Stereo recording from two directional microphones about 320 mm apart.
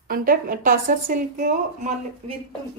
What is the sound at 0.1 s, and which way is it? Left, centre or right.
A woman's voice, right.